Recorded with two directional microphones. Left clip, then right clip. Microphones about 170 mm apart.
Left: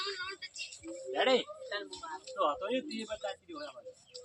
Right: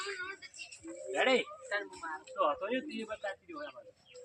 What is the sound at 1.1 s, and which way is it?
Speech, 30° right (ahead or behind).